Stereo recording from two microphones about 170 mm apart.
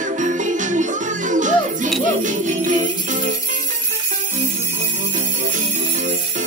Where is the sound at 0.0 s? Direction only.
45° right (ahead or behind).